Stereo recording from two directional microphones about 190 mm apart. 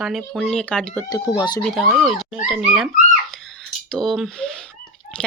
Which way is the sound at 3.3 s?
Centre (ahead or behind).